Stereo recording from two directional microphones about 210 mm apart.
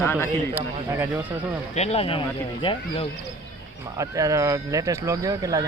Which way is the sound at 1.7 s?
30° left (ahead or behind).